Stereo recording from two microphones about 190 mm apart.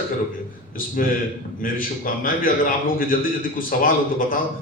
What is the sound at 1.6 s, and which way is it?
A man's voice, 45° left (ahead or behind).